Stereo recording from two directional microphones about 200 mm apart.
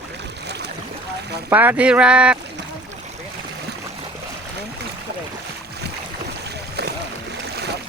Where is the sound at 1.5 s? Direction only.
10° right (ahead or behind).